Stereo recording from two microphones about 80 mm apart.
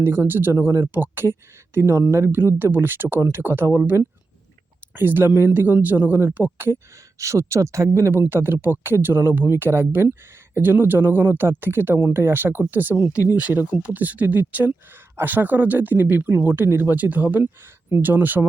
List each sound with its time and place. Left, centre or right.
0.0 s speech: right
7.2 s speech: right